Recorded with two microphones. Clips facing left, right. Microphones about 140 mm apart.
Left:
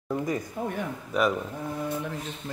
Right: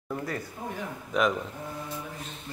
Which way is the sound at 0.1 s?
15° left (ahead or behind).